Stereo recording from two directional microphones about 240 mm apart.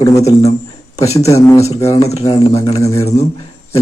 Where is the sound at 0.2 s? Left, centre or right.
Left.